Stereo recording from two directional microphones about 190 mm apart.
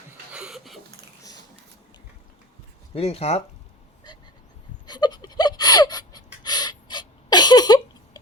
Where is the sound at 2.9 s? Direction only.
30° left (ahead or behind).